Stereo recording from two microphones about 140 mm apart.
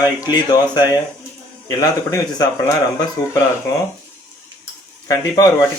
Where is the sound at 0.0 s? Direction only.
30° left (ahead or behind).